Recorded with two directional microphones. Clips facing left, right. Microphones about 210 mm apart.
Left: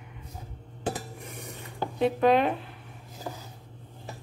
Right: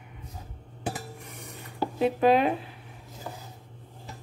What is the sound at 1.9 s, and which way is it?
Speech, 5° right (ahead or behind).